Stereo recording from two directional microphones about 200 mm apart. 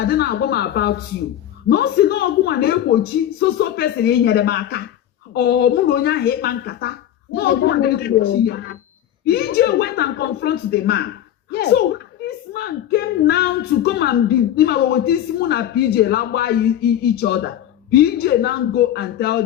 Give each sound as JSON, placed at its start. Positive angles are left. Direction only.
{"t": 0.0, "sound": "speech", "side_deg": 50}